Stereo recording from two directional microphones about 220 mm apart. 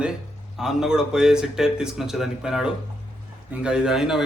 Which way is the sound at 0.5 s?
Centre (ahead or behind).